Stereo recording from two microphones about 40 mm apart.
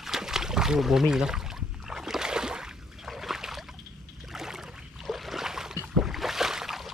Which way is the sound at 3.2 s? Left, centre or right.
Centre.